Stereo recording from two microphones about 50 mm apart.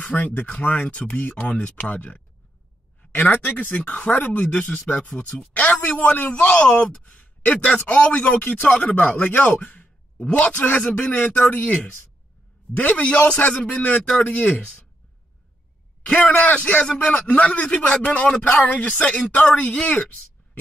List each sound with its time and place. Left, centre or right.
0.1 s speech: left
3.1 s a sound: left
3.4 s speech: left
16.3 s speech: left; by 17.3 s centre
17.3 s speech: left